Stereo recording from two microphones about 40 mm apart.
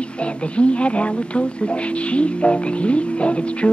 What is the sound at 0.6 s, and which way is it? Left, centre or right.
Speech, left.